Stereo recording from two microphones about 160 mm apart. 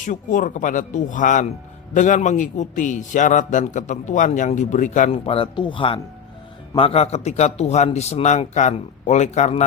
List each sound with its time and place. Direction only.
0.0 s speech: 55° left (ahead or behind)
5.1 s speech: 35° left (ahead or behind)